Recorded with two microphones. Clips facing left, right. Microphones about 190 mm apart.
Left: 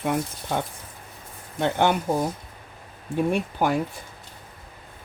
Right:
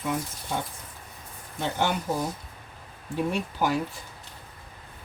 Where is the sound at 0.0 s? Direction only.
65° left (ahead or behind).